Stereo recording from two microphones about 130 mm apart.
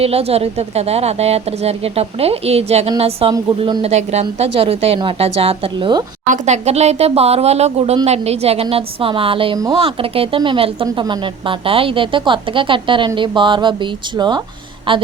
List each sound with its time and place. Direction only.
0.0 s a woman's voice: 50° right (ahead or behind)
6.2 s a woman's voice: 70° right (ahead or behind); by 15.0 s 40° right (ahead or behind)